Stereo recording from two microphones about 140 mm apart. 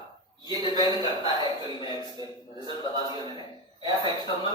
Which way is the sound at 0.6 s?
30° left (ahead or behind).